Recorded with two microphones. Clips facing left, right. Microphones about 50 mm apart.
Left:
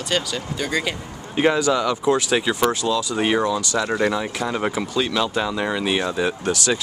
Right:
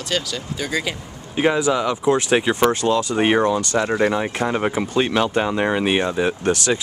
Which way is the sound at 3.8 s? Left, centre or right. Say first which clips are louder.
Right 1 dB; centre.